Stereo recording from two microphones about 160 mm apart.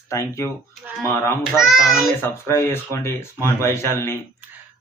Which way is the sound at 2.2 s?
15° left (ahead or behind).